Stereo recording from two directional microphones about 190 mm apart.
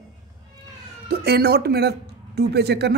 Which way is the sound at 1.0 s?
55° right (ahead or behind).